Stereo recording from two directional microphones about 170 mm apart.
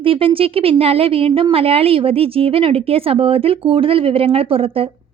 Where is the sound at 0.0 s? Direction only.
30° right (ahead or behind).